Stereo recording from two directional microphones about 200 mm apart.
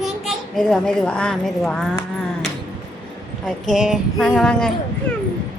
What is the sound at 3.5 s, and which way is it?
Speech, centre (ahead or behind).